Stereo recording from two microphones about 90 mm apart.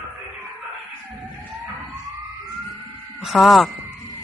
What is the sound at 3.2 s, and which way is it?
Speech, centre (ahead or behind).